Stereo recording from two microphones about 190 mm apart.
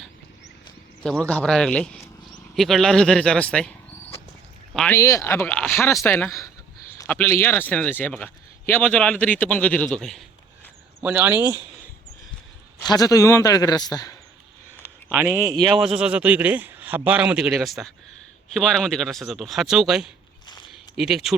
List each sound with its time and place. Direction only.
1.0 s speech: 5° left (ahead or behind)
4.9 s speech: 15° left (ahead or behind)
11.0 s a man's voice: 10° right (ahead or behind)
12.8 s a man's voice: 20° left (ahead or behind)
15.1 s a man's voice: 10° right (ahead or behind)